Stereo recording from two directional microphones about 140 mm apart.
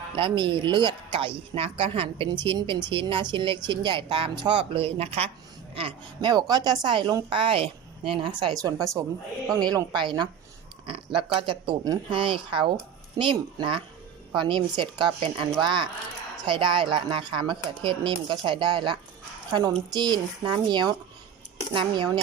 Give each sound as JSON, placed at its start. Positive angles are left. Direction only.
{"t": 0.2, "sound": "speech", "side_deg": -35}
{"t": 5.7, "sound": "a woman's voice", "side_deg": -35}